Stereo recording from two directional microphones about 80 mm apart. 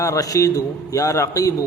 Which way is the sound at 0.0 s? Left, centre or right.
Left.